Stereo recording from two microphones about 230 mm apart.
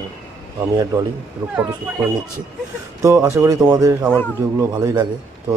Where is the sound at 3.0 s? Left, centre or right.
Centre.